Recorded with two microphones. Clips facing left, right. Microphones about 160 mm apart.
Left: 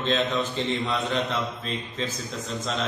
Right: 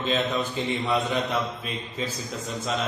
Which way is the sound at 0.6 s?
10° right (ahead or behind).